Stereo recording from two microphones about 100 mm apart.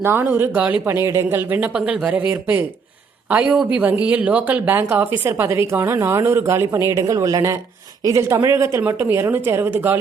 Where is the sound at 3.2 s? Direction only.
15° right (ahead or behind).